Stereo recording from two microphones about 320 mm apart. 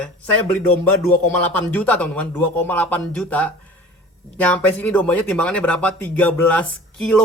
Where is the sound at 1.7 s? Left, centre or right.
Centre.